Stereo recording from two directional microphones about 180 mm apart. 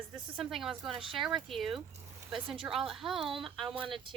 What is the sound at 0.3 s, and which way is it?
A woman's voice, centre (ahead or behind).